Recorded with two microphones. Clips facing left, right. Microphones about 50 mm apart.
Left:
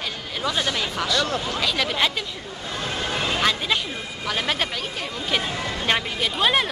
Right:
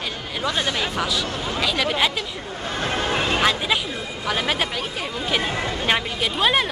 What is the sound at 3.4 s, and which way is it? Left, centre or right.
Speech, centre.